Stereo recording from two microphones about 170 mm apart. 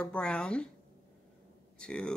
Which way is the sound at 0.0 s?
5° left (ahead or behind).